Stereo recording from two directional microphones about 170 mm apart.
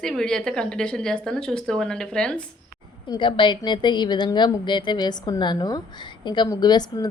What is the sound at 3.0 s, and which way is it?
A woman's voice, 30° left (ahead or behind).